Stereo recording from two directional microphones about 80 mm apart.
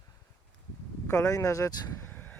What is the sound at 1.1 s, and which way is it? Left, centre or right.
Speech, left.